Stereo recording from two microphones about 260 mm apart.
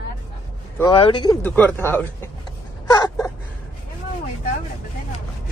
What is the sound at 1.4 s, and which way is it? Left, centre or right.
Speech, centre.